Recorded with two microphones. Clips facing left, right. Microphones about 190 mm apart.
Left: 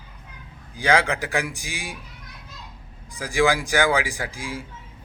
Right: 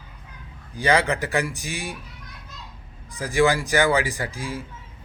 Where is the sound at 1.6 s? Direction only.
60° right (ahead or behind).